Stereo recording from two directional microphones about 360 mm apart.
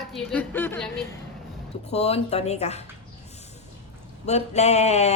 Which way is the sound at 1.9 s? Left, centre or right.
Centre.